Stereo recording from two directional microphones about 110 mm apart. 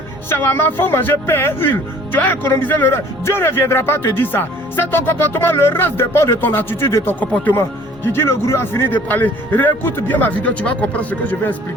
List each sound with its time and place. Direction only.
0.3 s speech: 20° left (ahead or behind)